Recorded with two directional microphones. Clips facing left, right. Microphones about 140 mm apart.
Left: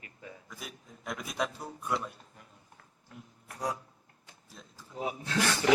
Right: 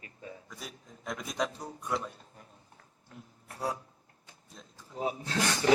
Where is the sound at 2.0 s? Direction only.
35° right (ahead or behind).